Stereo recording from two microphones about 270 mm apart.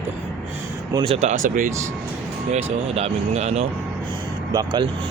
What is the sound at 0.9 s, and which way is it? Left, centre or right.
Speech, right.